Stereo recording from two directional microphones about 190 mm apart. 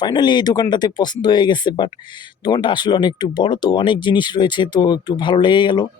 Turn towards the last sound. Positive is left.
turn(degrees=25)  # may be behind; listen again after turning